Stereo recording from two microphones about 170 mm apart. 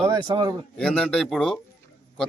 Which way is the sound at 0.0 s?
30° right (ahead or behind).